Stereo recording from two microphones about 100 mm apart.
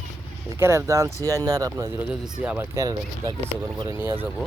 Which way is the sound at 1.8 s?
25° right (ahead or behind).